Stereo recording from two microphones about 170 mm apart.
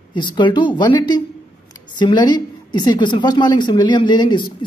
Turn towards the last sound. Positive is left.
turn(degrees=25)  # may be behind; listen again after turning